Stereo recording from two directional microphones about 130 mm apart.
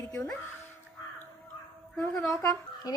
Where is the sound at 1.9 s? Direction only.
5° left (ahead or behind).